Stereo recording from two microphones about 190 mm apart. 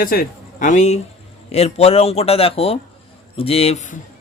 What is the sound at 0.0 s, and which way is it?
A man's voice, 45° left (ahead or behind).